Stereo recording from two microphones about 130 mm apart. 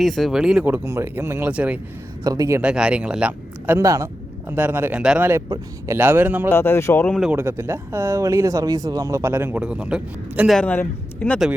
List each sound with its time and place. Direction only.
0.0 s speech: centre (ahead or behind)
0.6 s speech: 20° right (ahead or behind)
2.2 s speech: 25° right (ahead or behind)
2.6 s speech: 10° right (ahead or behind)
5.5 s speech: 25° right (ahead or behind)
6.0 s speech: 15° right (ahead or behind)
6.5 s a man's voice: 20° left (ahead or behind)
7.2 s speech: 10° right (ahead or behind)
10.6 s a man's voice: 10° left (ahead or behind)